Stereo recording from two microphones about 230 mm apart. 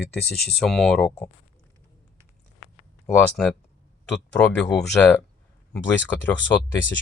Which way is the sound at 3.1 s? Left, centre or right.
Centre.